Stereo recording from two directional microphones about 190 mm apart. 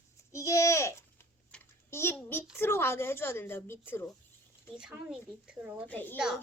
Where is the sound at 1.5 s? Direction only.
15° left (ahead or behind).